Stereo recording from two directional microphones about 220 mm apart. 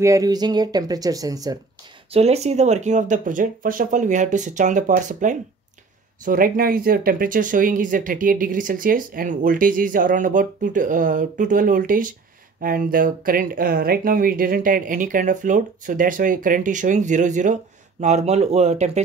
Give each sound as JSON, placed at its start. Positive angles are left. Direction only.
{"t": 0.0, "sound": "speech", "side_deg": -15}
{"t": 2.1, "sound": "speech", "side_deg": -30}